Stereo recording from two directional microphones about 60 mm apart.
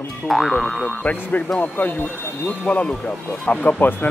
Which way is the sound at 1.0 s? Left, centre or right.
Left.